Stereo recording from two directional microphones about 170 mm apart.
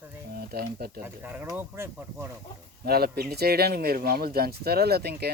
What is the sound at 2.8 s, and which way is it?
Speech, 65° right (ahead or behind).